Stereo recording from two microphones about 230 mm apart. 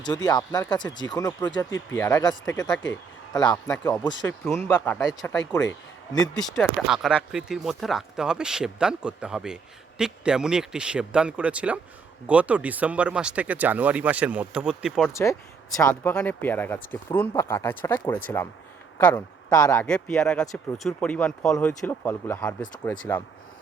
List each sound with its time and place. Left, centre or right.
0.0 s speech: centre
4.5 s speech: centre
15.1 s speech: centre